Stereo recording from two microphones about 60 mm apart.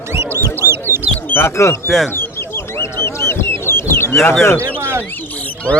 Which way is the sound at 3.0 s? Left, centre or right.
Left.